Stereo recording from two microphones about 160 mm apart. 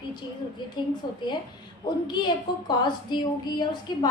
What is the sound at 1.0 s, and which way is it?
A woman's voice, 25° left (ahead or behind).